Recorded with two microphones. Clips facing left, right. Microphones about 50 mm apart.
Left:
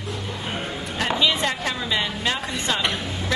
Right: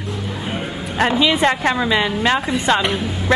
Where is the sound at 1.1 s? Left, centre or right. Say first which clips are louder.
Right 5 dB; centre.